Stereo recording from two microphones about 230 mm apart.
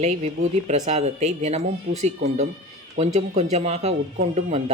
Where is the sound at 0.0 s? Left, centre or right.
Right.